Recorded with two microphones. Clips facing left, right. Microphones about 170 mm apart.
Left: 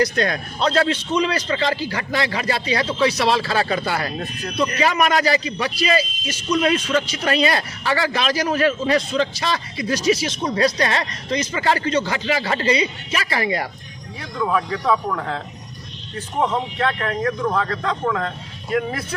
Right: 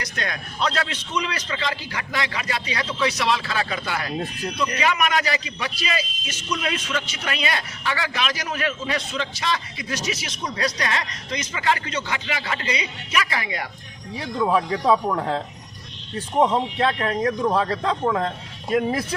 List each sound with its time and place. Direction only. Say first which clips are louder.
0.0 s a man's voice: left 11 dB; 35° left (ahead or behind)
14.4 s speech: right 1 dB; 25° right (ahead or behind)
16.4 s speech: right 2 dB; 20° right (ahead or behind)